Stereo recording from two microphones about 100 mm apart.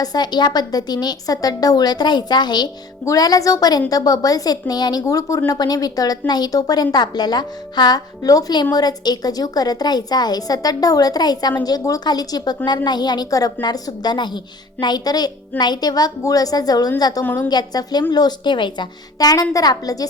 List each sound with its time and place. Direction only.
0.0 s a woman's voice: 45° left (ahead or behind)
17.2 s a woman's voice: 20° left (ahead or behind)
17.5 s a woman's voice: 40° left (ahead or behind)